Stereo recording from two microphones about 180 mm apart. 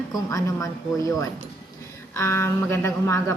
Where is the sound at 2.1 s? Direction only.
15° left (ahead or behind).